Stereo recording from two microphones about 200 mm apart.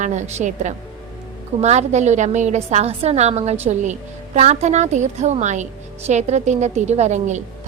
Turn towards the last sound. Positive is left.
turn(degrees=-35)  # may be behind; listen again after turning